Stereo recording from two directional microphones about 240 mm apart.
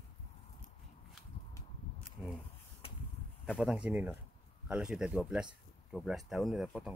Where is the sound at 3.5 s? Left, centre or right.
Centre.